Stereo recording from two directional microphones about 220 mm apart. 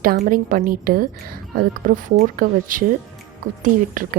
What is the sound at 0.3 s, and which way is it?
A woman's voice, 40° right (ahead or behind).